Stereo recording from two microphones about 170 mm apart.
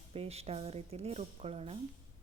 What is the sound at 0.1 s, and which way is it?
A woman's voice, 35° right (ahead or behind).